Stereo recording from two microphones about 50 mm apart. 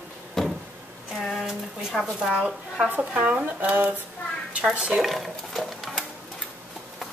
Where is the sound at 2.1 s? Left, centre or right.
Right.